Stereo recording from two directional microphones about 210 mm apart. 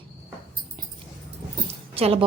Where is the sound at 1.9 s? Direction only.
25° right (ahead or behind).